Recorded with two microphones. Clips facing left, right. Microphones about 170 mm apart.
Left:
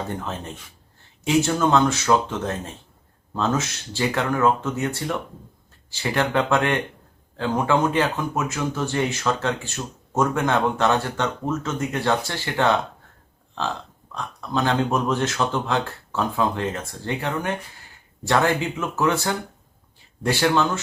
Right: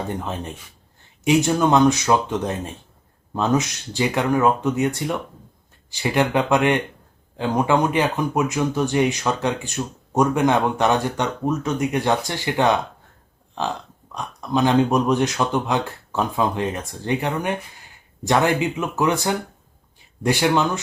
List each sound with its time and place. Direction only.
1.2 s speech: 15° right (ahead or behind)